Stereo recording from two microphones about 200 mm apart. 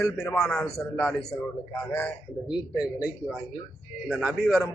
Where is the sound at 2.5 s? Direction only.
5° right (ahead or behind).